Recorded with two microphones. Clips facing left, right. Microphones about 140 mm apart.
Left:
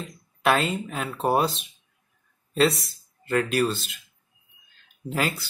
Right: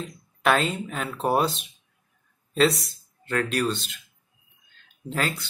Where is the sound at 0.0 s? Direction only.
Centre (ahead or behind).